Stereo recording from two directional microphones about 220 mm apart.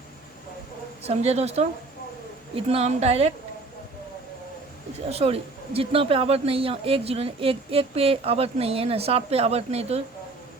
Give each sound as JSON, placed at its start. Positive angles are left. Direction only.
{"t": 1.0, "sound": "speech", "side_deg": -30}
{"t": 5.0, "sound": "speech", "side_deg": -25}